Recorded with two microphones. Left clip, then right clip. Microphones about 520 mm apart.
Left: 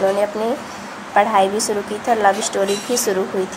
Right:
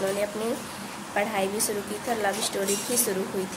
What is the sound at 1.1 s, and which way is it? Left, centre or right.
Speech, right.